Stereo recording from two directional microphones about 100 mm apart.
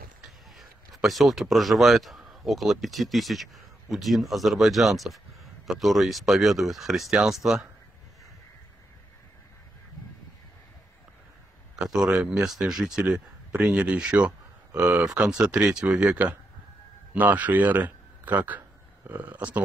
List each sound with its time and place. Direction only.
0.6 s speech: centre (ahead or behind)
11.7 s a man's voice: 5° right (ahead or behind)